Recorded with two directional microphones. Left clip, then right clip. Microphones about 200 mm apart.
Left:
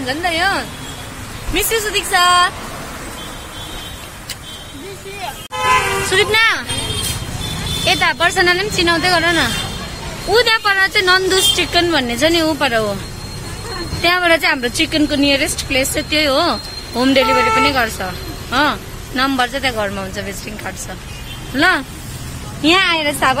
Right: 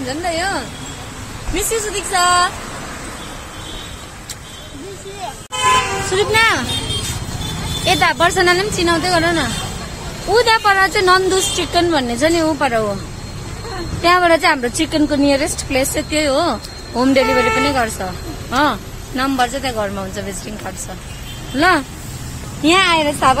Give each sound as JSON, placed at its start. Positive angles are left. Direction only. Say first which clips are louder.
{"t": 0.0, "sound": "speech", "louder": "left 3 dB", "side_deg": 5}
{"t": 6.0, "sound": "speech", "louder": "left 1 dB", "side_deg": 5}
{"t": 7.8, "sound": "speech", "louder": "right 1 dB", "side_deg": -10}
{"t": 14.0, "sound": "speech", "louder": "right 1 dB", "side_deg": -10}